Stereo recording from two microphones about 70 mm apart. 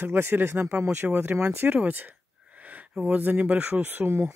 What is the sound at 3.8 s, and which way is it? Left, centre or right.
Speech, right.